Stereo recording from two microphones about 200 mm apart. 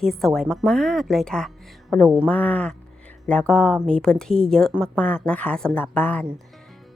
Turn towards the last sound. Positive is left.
turn(degrees=5)  # may be behind; listen again after turning